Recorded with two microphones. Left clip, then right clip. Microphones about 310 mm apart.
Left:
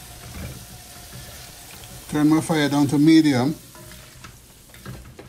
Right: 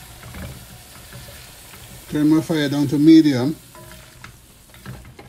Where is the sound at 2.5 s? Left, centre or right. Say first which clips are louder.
Even; centre.